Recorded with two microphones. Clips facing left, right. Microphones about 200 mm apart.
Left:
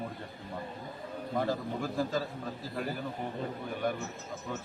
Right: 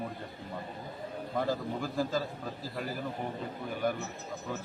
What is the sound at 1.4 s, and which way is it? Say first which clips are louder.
Speech: even; centre (ahead or behind).